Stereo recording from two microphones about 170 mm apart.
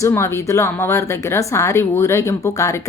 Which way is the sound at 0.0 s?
15° left (ahead or behind).